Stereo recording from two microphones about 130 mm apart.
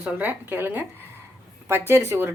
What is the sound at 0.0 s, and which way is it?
Speech, 10° right (ahead or behind).